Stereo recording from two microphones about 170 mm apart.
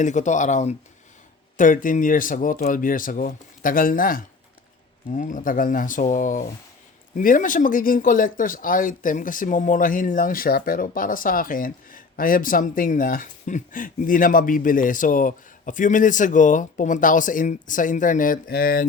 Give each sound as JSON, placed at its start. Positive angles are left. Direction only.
{"t": 0.0, "sound": "speech", "side_deg": 45}